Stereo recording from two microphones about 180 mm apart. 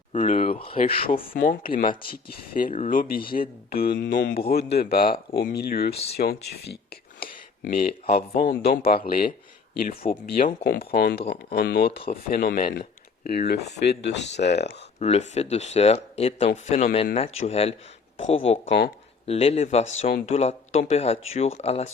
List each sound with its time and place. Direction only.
0.1 s speech: 40° left (ahead or behind)
1.3 s speech: 50° left (ahead or behind); by 4.2 s 80° left
4.3 s speech: 60° left (ahead or behind)
8.0 s speech: 35° left (ahead or behind)
8.9 s speech: 55° left (ahead or behind)
14.9 s speech: 35° left (ahead or behind)
18.6 s speech: 80° left
19.2 s speech: 35° left (ahead or behind)